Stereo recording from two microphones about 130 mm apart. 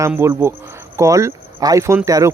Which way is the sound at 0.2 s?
20° right (ahead or behind).